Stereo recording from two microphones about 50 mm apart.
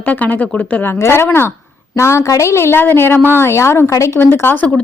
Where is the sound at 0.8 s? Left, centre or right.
Left.